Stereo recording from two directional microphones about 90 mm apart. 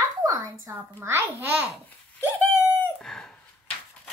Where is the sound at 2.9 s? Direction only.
5° left (ahead or behind).